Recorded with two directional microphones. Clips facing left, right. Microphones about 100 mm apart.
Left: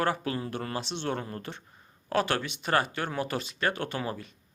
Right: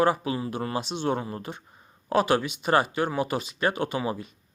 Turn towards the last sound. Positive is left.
turn(degrees=-15)  # may be behind; listen again after turning